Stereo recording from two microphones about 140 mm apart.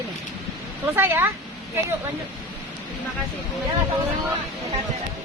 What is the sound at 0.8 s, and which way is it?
Speech, 15° right (ahead or behind).